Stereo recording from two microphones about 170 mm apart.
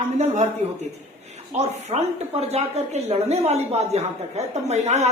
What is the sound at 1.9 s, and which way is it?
A woman's voice, 30° right (ahead or behind).